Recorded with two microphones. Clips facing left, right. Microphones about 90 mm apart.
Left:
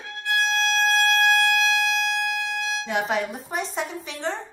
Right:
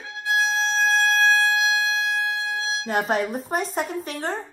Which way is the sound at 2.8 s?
40° right (ahead or behind).